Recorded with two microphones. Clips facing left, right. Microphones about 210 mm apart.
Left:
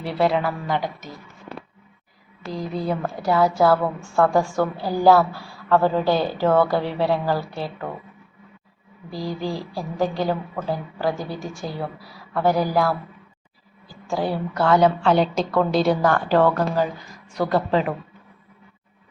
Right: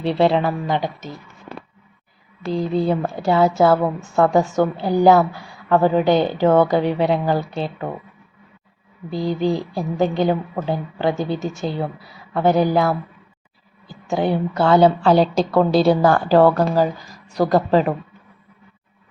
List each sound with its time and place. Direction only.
0.0 s a woman's voice: 25° right (ahead or behind)
2.5 s a woman's voice: 30° right (ahead or behind)
9.0 s a woman's voice: 20° right (ahead or behind); by 17.9 s 40° right (ahead or behind)